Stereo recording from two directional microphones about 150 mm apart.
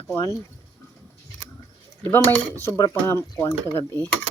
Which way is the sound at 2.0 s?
15° left (ahead or behind).